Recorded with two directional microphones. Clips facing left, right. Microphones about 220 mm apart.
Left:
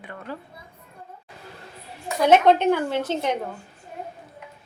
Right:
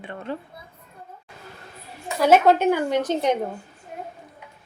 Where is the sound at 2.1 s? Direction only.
5° right (ahead or behind).